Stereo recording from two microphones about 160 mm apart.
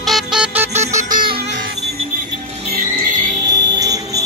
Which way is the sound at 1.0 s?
55° right (ahead or behind).